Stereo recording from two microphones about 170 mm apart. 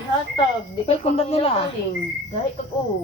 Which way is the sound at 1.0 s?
35° left (ahead or behind).